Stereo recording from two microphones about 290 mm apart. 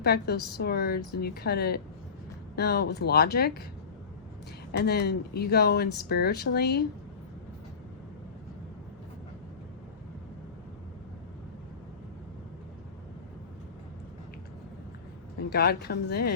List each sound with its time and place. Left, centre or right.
0.0 s speech: left
4.7 s speech: left
15.4 s speech: left